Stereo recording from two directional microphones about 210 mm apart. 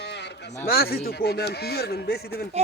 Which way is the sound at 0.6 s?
45° left (ahead or behind).